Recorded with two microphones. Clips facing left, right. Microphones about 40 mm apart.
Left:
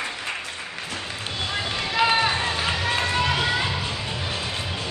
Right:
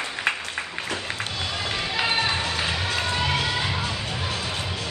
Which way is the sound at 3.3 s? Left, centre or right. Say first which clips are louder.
Left 2 dB; left.